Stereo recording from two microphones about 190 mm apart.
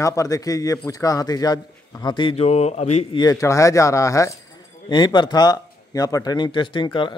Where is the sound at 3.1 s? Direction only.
20° left (ahead or behind).